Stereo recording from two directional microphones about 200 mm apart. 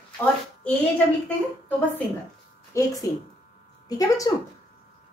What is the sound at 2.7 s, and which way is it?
A woman's voice, 15° left (ahead or behind).